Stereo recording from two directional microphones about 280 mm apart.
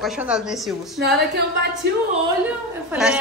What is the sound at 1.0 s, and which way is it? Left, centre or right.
Speech, right.